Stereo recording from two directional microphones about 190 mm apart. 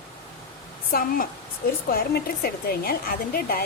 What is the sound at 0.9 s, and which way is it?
A woman's voice, 50° left (ahead or behind).